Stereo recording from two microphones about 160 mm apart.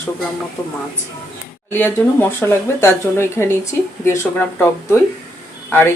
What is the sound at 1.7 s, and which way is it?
Speech, 15° left (ahead or behind).